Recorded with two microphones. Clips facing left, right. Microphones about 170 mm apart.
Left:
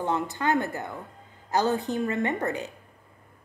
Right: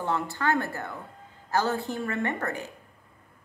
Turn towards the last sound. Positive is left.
turn(degrees=20)  # may be behind; listen again after turning